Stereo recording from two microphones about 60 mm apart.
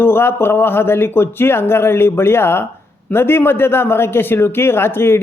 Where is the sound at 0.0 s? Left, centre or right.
Left.